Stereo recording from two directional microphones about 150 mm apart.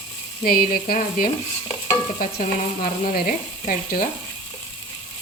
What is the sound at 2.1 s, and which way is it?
Stir, 60° left (ahead or behind).